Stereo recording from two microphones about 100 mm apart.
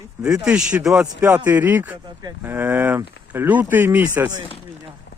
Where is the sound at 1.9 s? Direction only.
40° right (ahead or behind).